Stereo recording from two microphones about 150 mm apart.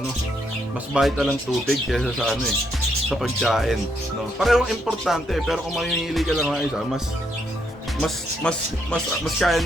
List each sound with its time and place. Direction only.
0.9 s music: centre (ahead or behind)
8.0 s music: 5° left (ahead or behind)